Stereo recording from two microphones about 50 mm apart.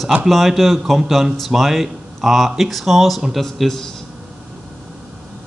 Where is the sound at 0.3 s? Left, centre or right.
Centre.